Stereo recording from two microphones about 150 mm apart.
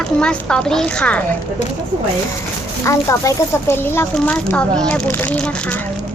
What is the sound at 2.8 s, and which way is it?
Speech, 20° left (ahead or behind).